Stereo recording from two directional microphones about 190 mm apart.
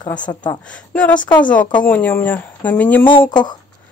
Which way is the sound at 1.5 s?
5° left (ahead or behind).